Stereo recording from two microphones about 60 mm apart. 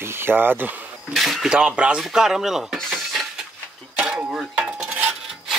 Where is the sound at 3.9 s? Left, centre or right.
Centre.